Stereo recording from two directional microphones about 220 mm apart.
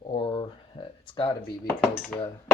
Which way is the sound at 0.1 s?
25° left (ahead or behind).